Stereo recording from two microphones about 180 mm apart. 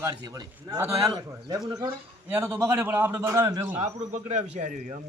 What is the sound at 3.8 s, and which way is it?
A man's voice, 40° right (ahead or behind).